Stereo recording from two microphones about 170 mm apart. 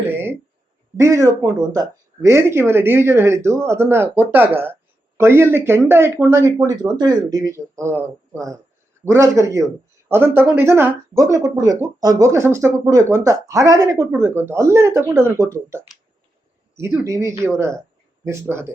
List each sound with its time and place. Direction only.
0.1 s a sound: 15° right (ahead or behind)
0.9 s speech: 15° right (ahead or behind)
16.7 s speech: 15° right (ahead or behind)